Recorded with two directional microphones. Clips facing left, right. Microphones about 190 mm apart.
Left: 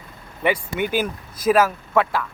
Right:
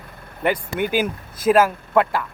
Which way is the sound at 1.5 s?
5° right (ahead or behind).